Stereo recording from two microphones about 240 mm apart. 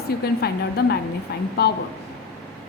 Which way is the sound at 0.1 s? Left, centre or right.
Left.